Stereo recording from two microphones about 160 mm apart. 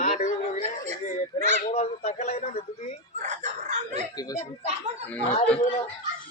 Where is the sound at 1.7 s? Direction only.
40° left (ahead or behind).